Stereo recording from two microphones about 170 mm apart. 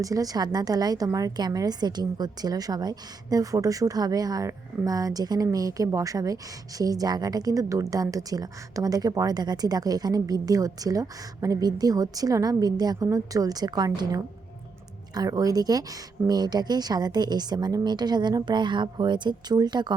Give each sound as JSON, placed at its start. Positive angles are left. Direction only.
{"t": 0.0, "sound": "a woman's voice", "side_deg": -20}